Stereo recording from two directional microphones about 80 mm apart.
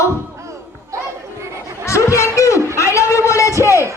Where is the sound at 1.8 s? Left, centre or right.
Left.